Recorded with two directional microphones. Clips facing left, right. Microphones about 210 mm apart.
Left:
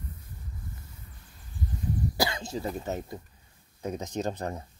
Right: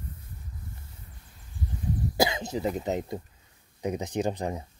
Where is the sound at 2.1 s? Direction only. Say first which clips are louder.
Right 4 dB; 20° right (ahead or behind).